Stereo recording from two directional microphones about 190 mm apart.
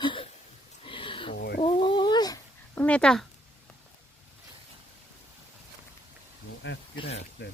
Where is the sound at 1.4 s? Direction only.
55° left (ahead or behind).